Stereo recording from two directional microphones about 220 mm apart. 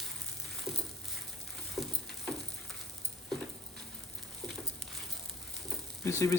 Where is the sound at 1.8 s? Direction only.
Centre (ahead or behind).